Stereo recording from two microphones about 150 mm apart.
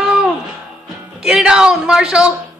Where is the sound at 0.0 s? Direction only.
5° right (ahead or behind).